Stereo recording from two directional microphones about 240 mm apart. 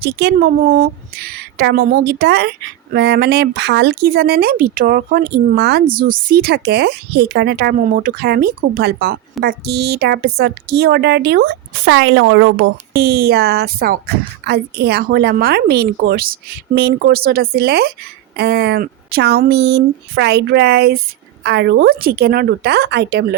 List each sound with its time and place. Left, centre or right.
0.0 s a woman's voice: right